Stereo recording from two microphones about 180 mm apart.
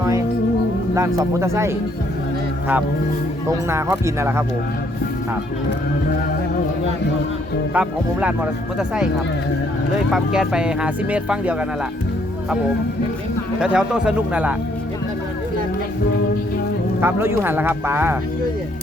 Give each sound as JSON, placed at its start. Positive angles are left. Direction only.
{"t": 0.9, "sound": "speech", "side_deg": -15}
{"t": 3.7, "sound": "speech", "side_deg": -15}
{"t": 7.7, "sound": "speech", "side_deg": -10}
{"t": 10.1, "sound": "speech", "side_deg": 0}
{"t": 13.6, "sound": "speech", "side_deg": -5}
{"t": 17.0, "sound": "speech", "side_deg": -10}